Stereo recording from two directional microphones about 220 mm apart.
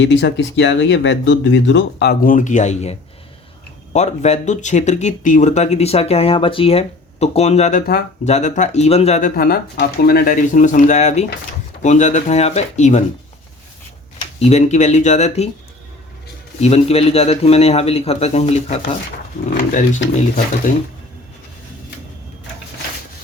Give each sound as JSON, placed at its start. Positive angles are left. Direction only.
{"t": 0.0, "sound": "speech", "side_deg": 55}
{"t": 3.9, "sound": "speech", "side_deg": 30}
{"t": 14.2, "sound": "speech", "side_deg": 30}
{"t": 16.6, "sound": "a man's voice", "side_deg": 30}